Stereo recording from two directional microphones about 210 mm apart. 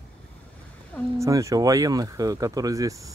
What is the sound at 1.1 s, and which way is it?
Speech, 15° right (ahead or behind).